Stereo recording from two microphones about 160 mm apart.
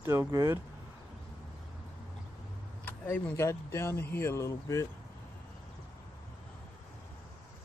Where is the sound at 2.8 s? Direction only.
10° left (ahead or behind).